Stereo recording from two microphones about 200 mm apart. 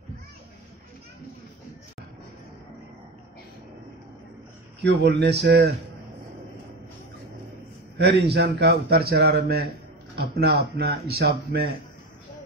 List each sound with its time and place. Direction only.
4.8 s speech: 55° right (ahead or behind)
8.0 s a man's voice: 55° right (ahead or behind)